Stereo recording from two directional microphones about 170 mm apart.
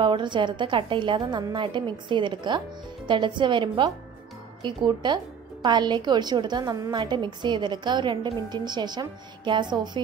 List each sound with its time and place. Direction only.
0.0 s a woman's voice: 30° right (ahead or behind)